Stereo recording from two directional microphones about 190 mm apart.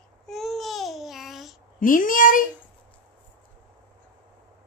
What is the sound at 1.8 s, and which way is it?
Speech, 45° left (ahead or behind).